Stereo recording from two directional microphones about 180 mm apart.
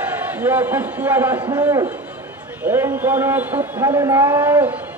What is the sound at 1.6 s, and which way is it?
A man's voice, 15° right (ahead or behind).